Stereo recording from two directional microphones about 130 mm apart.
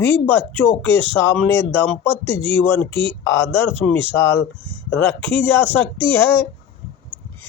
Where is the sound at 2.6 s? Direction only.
15° left (ahead or behind).